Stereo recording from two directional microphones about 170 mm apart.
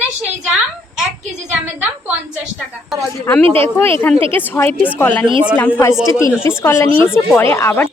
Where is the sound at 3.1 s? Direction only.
10° left (ahead or behind).